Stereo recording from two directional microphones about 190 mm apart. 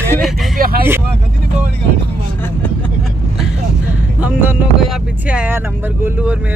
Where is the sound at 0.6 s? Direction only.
50° right (ahead or behind).